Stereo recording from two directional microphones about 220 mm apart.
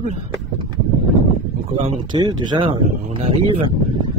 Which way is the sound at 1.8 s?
20° right (ahead or behind).